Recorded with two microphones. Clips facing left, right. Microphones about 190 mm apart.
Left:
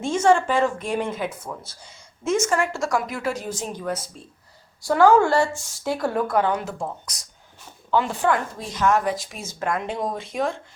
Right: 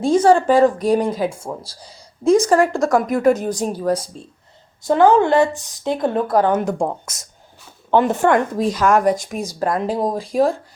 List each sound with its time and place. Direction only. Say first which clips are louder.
0.0 s speech: right 5 dB; 35° right (ahead or behind)
4.8 s speech: right 3 dB; 20° right (ahead or behind); by 6.7 s 45° right (ahead or behind)
6.7 s a woman's voice: right 9 dB; 65° right (ahead or behind)
7.9 s speech: right 7 dB; 50° right (ahead or behind)
8.3 s a woman's voice: right 7 dB; 65° right (ahead or behind)
9.3 s speech: right 6 dB; 35° right (ahead or behind)